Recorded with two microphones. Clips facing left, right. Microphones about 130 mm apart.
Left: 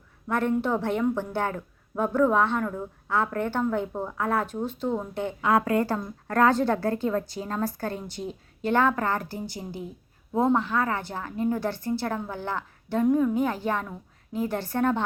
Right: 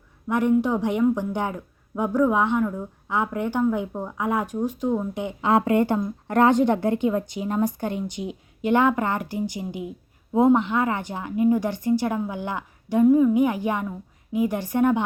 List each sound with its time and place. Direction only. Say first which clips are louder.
0.3 s a woman's voice: right 4 dB; 15° right (ahead or behind)
5.4 s a woman's voice: right 3 dB; 25° right (ahead or behind)